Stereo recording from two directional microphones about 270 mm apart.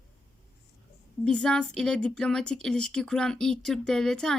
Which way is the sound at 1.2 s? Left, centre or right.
Centre.